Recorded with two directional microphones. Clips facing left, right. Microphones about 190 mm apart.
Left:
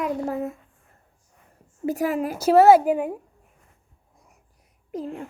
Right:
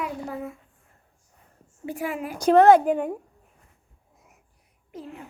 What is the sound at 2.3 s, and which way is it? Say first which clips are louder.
Speech: even; 5° left (ahead or behind).